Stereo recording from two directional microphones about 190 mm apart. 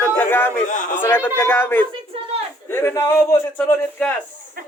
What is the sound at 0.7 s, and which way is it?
Speech, 45° left (ahead or behind).